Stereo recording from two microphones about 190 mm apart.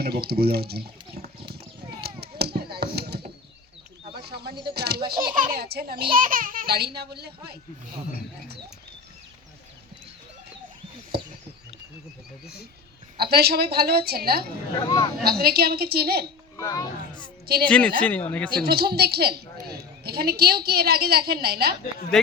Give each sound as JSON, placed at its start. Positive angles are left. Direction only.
{"t": 0.0, "sound": "speech", "side_deg": -55}
{"t": 2.0, "sound": "chop", "side_deg": -55}
{"t": 4.1, "sound": "a sound", "side_deg": -55}
{"t": 4.9, "sound": "a child's voice", "side_deg": -25}
{"t": 5.3, "sound": "a woman's voice", "side_deg": -45}
{"t": 11.1, "sound": "a sound", "side_deg": -55}
{"t": 13.1, "sound": "a woman's voice", "side_deg": -55}
{"t": 16.6, "sound": "speech", "side_deg": 20}
{"t": 17.4, "sound": "speech", "side_deg": -55}
{"t": 17.7, "sound": "speech", "side_deg": 5}
{"t": 18.5, "sound": "a woman's voice", "side_deg": -55}
{"t": 22.1, "sound": "speech", "side_deg": 5}